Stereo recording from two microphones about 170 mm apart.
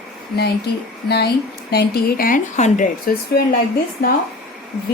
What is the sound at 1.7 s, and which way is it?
Speech, 70° left (ahead or behind).